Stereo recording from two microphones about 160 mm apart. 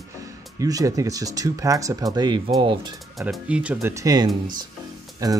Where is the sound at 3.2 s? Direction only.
5° right (ahead or behind).